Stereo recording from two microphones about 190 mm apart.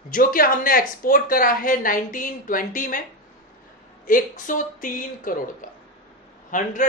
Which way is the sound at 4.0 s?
45° left (ahead or behind).